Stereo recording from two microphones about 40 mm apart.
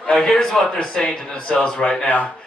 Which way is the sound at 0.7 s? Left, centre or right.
Left.